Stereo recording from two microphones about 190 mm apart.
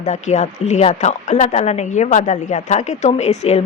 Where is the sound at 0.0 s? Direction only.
35° left (ahead or behind).